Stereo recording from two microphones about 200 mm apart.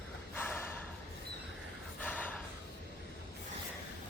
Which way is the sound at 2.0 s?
10° left (ahead or behind).